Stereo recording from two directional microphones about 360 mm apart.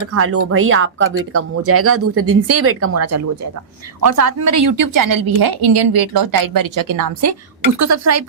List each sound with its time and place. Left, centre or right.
0.1 s a woman's voice: right